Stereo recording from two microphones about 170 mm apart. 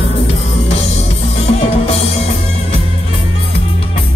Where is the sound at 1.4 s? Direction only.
40° left (ahead or behind).